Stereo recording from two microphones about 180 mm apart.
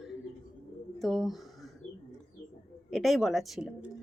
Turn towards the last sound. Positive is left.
turn(degrees=-5)  # may be behind; listen again after turning